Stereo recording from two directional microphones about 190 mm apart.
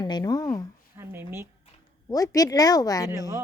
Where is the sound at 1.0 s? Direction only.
10° right (ahead or behind).